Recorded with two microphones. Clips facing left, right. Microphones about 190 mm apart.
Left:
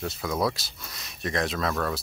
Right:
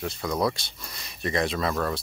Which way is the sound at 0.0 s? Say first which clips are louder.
Right 1 dB; centre (ahead or behind).